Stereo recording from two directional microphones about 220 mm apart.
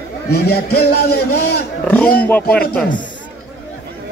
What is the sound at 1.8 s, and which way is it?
Speech, 5° left (ahead or behind).